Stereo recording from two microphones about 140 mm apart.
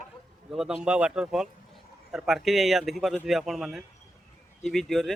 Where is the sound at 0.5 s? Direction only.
5° right (ahead or behind).